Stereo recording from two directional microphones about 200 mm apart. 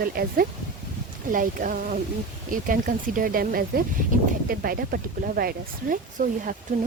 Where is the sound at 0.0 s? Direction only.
45° right (ahead or behind).